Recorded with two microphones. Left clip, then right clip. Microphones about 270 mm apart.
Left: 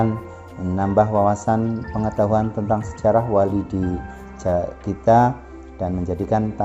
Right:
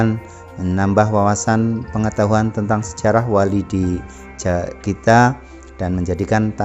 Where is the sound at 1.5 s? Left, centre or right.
Right.